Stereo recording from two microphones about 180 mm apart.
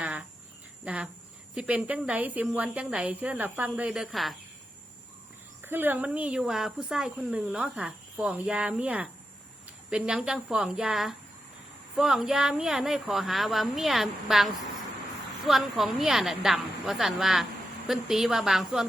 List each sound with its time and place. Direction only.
0.0 s a sound: 10° right (ahead or behind)
0.9 s a woman's voice: 5° right (ahead or behind)
5.6 s a woman's voice: 10° right (ahead or behind)